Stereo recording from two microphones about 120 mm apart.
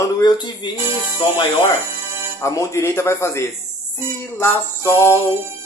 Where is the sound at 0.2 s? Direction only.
40° left (ahead or behind).